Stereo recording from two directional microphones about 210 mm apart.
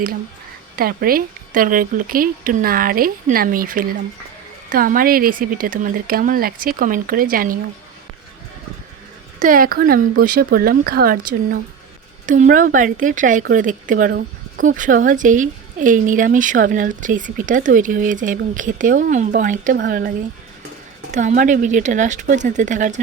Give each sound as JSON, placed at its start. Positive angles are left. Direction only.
{"t": 0.8, "sound": "a woman's voice", "side_deg": -45}
{"t": 9.4, "sound": "a woman's voice", "side_deg": -40}
{"t": 12.2, "sound": "speech", "side_deg": -40}